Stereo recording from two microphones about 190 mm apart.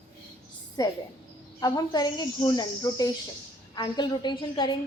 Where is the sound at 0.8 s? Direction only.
20° left (ahead or behind).